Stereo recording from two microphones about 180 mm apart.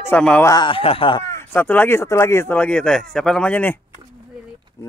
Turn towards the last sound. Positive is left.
turn(degrees=10)  # may be behind; listen again after turning